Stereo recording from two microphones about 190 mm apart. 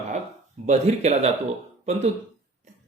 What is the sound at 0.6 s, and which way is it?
Speech, 35° right (ahead or behind).